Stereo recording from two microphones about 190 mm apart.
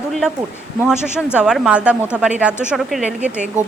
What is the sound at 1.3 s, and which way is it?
A woman's voice, centre (ahead or behind).